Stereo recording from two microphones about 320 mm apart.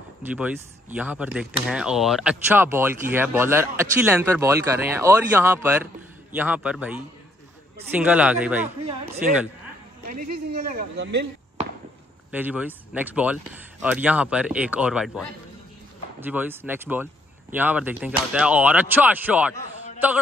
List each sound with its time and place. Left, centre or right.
0.9 s speech: centre
10.0 s a man's voice: right
12.3 s speech: centre